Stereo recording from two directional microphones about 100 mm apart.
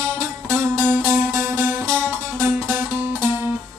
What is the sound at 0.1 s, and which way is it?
Music, 25° right (ahead or behind).